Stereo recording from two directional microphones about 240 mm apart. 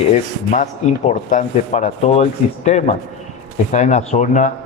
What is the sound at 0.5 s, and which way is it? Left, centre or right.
A man's voice, left.